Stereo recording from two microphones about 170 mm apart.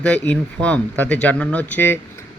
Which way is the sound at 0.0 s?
5° left (ahead or behind).